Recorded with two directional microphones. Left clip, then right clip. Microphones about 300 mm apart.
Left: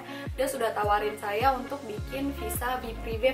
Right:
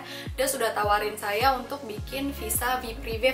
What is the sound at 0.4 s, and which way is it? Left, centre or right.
A woman's voice, centre.